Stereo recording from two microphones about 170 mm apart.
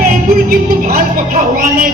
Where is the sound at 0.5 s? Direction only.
60° right (ahead or behind).